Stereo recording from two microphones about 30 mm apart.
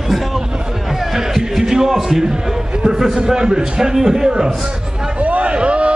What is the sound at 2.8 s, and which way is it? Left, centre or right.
A man's voice, centre.